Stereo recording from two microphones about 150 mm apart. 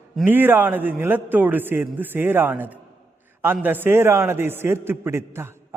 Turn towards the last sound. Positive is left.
turn(degrees=-15)  # may be behind; listen again after turning